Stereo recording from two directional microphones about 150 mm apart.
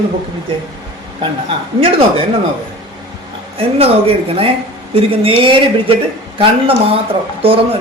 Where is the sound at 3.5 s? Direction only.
40° right (ahead or behind).